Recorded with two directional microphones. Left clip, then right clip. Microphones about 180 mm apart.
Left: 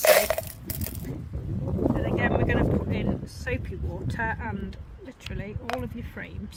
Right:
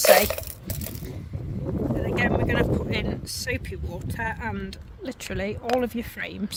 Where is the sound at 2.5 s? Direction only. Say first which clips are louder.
Right 2 dB; 60° right (ahead or behind).